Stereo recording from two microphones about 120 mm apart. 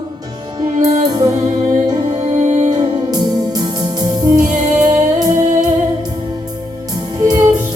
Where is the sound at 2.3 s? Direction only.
80° right.